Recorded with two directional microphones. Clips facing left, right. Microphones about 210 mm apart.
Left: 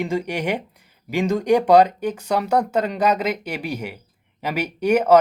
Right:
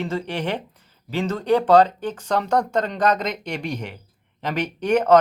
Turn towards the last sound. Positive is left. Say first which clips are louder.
# left 1 dB
turn(degrees=10)  # may be behind; listen again after turning